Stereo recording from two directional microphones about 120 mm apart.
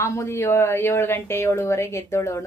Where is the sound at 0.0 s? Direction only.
25° left (ahead or behind).